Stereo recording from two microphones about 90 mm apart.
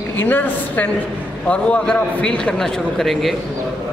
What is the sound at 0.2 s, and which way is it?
A woman's voice, 20° left (ahead or behind).